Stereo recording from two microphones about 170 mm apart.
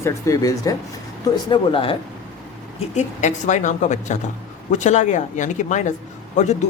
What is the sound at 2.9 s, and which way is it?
A woman's voice, 45° left (ahead or behind).